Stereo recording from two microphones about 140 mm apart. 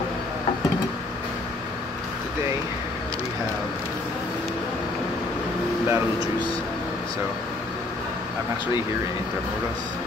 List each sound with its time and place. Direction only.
5.9 s air conditioning: 20° right (ahead or behind)